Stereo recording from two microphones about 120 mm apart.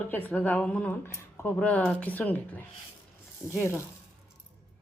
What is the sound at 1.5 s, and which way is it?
A man's voice, 10° left (ahead or behind).